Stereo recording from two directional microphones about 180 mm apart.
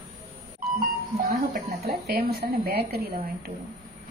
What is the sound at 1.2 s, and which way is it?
Speech, 55° right (ahead or behind).